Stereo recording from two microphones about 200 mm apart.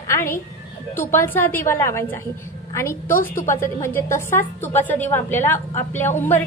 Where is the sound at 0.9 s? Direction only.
10° left (ahead or behind).